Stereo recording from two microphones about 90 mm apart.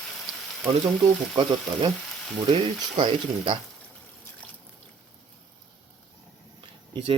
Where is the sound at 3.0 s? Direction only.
65° right (ahead or behind).